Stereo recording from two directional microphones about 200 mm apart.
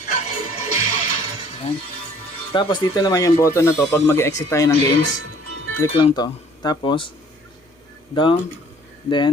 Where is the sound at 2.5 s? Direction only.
20° left (ahead or behind).